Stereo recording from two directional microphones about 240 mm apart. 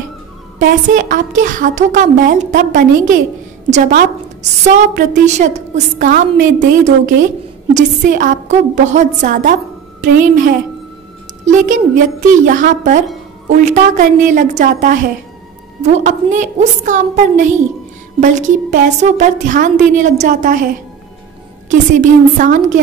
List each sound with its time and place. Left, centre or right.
0.6 s a woman's voice: right